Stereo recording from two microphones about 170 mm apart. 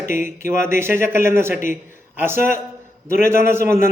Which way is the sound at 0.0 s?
50° left (ahead or behind).